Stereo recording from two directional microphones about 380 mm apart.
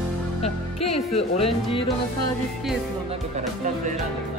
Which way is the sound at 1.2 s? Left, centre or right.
Centre.